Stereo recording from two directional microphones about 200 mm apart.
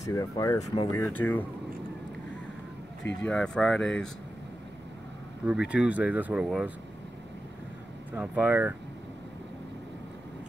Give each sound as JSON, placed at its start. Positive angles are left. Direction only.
{"t": 0.0, "sound": "speech", "side_deg": 15}
{"t": 3.2, "sound": "speech", "side_deg": 5}
{"t": 5.7, "sound": "speech", "side_deg": -5}
{"t": 8.1, "sound": "speech", "side_deg": -5}